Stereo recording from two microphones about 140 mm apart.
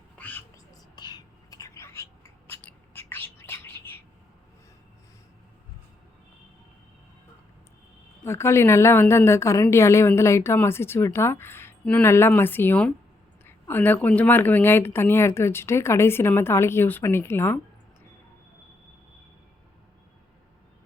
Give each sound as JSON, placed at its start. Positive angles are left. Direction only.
{"t": 0.2, "sound": "whispering", "side_deg": 10}
{"t": 0.5, "sound": "whispering", "side_deg": 30}
{"t": 8.2, "sound": "a woman's voice", "side_deg": 20}